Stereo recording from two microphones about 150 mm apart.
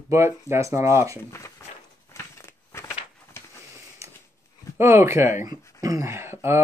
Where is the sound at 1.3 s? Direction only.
20° left (ahead or behind).